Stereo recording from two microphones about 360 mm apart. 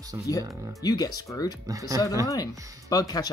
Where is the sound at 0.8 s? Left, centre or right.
Centre.